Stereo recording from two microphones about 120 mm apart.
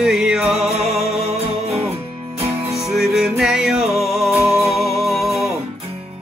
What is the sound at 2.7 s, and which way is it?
Music, centre (ahead or behind).